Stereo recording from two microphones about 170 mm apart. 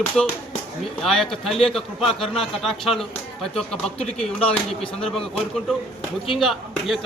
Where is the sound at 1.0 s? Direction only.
Centre (ahead or behind).